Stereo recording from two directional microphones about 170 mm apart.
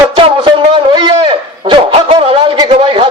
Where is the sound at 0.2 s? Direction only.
30° right (ahead or behind).